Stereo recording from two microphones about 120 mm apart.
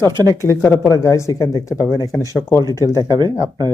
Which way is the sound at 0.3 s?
25° left (ahead or behind).